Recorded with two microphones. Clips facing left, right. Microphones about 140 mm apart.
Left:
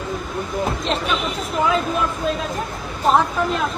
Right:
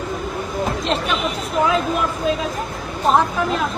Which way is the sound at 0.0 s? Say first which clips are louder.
Right 1 dB; centre (ahead or behind).